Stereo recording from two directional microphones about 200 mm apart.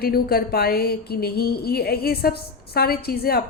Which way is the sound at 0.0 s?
50° left (ahead or behind).